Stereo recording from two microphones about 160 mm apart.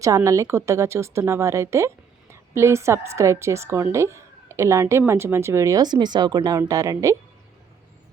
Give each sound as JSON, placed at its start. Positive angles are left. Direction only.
{"t": 0.0, "sound": "a woman's voice", "side_deg": -20}